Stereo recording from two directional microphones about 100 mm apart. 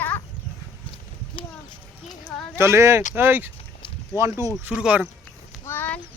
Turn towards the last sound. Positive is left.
turn(degrees=20)  # may be behind; listen again after turning